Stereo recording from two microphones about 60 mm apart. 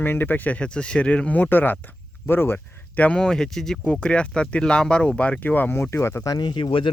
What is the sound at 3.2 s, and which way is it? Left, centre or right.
Speech, centre.